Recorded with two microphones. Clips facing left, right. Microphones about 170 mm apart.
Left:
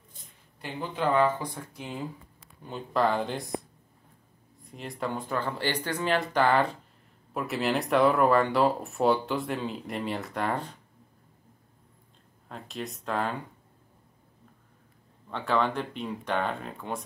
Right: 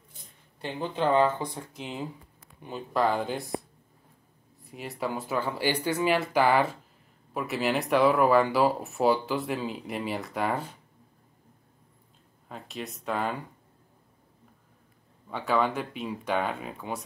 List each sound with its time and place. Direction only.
0.6 s speech: 25° right (ahead or behind)
2.6 s speech: 5° right (ahead or behind)
4.6 s speech: 5° right (ahead or behind)
12.4 s speech: centre (ahead or behind)
15.2 s speech: 5° right (ahead or behind)